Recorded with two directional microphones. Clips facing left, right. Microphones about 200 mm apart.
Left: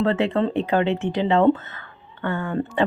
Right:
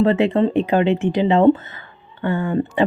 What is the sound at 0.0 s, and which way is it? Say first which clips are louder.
Speech: right 5 dB; 15° right (ahead or behind).